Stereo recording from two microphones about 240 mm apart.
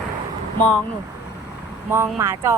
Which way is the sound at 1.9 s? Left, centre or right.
Centre.